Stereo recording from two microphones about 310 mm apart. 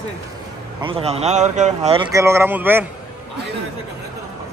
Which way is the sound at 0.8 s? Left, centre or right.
Centre.